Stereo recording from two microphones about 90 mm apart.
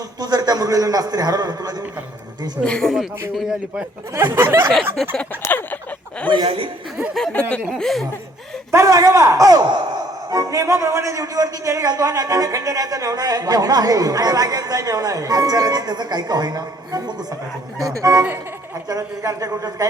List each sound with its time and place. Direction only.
0.2 s a man's voice: 50° right (ahead or behind)
2.6 s a man's voice: 10° left (ahead or behind)
4.1 s speech: 25° right (ahead or behind)
4.7 s a man's voice: 5° left (ahead or behind)
5.4 s a sound: 20° left (ahead or behind)
6.4 s speech: 90° right
7.1 s a man's voice: centre (ahead or behind)
8.7 s a man's voice: 35° right (ahead or behind)